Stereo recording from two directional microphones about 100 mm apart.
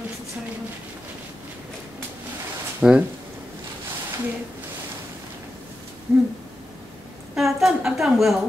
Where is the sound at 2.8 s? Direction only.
10° right (ahead or behind).